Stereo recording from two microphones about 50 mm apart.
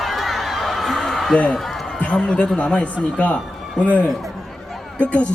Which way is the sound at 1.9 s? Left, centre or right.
Left.